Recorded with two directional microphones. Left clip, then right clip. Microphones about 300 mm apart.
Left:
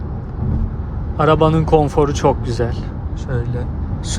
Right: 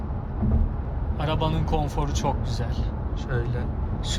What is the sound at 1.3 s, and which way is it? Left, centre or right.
Speech, left.